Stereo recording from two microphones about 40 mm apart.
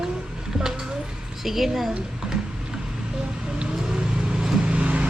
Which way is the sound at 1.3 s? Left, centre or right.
Centre.